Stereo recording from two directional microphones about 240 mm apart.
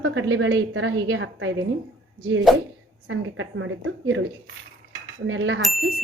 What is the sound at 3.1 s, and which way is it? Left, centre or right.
Speech, right.